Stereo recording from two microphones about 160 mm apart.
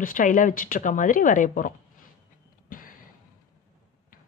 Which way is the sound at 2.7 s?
60° left (ahead or behind).